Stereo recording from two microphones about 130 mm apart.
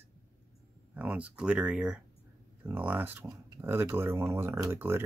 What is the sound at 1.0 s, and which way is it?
Speech, 10° right (ahead or behind).